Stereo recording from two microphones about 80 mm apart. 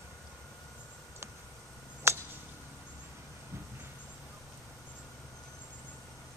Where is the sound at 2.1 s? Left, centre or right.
Right.